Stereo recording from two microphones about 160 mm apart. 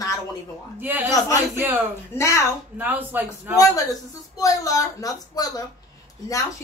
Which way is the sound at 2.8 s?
10° right (ahead or behind).